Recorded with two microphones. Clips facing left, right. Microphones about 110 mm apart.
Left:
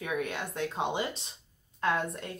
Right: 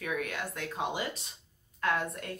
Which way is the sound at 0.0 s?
25° left (ahead or behind).